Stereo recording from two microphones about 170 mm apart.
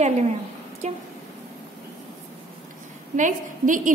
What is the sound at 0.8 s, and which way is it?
Speech, 45° right (ahead or behind).